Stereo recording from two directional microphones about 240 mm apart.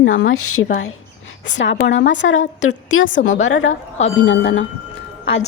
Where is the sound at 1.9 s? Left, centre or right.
Left.